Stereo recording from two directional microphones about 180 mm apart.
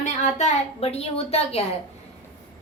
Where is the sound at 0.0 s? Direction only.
40° left (ahead or behind).